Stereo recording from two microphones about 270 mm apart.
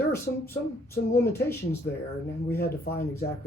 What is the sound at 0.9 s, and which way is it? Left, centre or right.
Speech, centre.